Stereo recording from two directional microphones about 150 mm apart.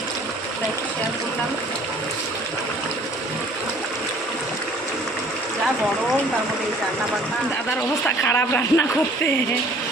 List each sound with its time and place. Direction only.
8.0 s a man's voice: 15° left (ahead or behind)